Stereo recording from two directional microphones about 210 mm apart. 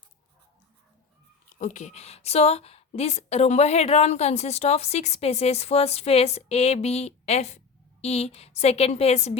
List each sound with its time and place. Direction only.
1.5 s a woman's voice: 40° left (ahead or behind)